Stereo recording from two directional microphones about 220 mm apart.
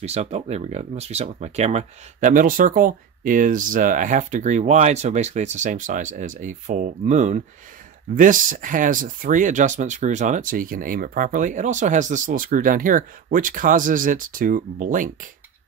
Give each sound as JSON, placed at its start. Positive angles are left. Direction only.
{"t": 0.0, "sound": "speech", "side_deg": -30}